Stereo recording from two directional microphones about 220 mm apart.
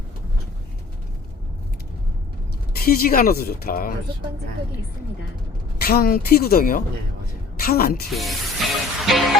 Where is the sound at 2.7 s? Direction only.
40° left (ahead or behind).